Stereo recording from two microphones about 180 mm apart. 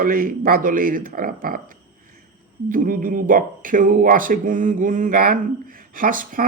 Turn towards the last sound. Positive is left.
turn(degrees=-50)  # may be behind; listen again after turning